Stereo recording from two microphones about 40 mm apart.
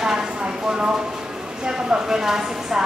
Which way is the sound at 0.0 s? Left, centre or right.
Centre.